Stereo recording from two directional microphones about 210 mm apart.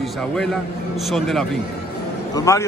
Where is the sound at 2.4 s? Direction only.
15° left (ahead or behind).